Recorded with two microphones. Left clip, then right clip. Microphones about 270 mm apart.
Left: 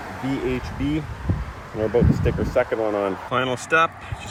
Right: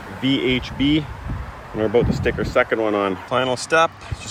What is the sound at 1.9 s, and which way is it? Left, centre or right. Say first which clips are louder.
Speech: right 3 dB; right.